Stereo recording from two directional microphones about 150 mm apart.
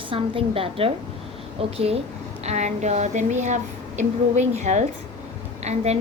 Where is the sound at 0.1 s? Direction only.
40° right (ahead or behind).